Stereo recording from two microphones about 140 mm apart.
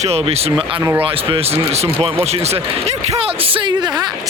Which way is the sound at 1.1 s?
45° right (ahead or behind).